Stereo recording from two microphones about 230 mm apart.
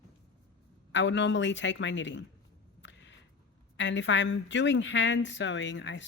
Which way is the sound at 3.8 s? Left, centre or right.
Left.